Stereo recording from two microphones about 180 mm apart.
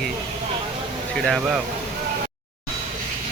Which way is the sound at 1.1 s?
Centre (ahead or behind).